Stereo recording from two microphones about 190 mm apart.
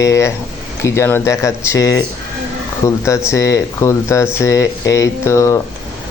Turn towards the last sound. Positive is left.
turn(degrees=15)  # may be behind; listen again after turning